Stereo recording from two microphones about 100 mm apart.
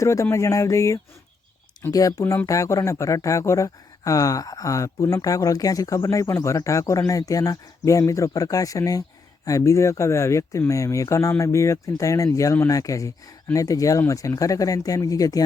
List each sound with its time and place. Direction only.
0.0 s speech: 30° left (ahead or behind)